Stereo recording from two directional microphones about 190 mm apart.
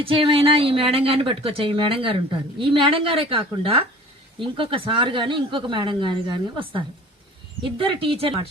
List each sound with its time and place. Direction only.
0.0 s speech: 30° right (ahead or behind)